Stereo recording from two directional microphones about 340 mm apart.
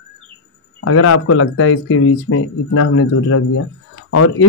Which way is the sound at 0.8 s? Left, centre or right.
Left.